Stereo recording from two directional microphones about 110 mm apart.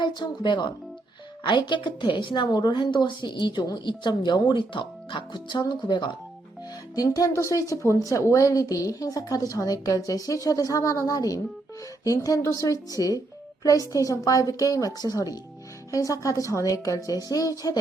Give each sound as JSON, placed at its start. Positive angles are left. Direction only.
{"t": 0.0, "sound": "a woman's voice", "side_deg": 45}